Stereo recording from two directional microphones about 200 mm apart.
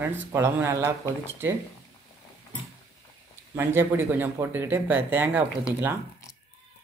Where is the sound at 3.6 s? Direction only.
10° right (ahead or behind).